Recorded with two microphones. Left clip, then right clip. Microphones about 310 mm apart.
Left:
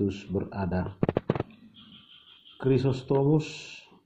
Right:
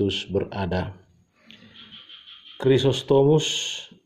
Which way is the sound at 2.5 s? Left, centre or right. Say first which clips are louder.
Right 7 dB; right.